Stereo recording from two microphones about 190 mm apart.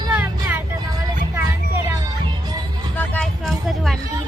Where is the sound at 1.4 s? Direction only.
15° right (ahead or behind).